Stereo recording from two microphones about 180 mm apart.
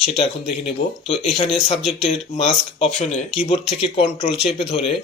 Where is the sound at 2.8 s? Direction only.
35° left (ahead or behind).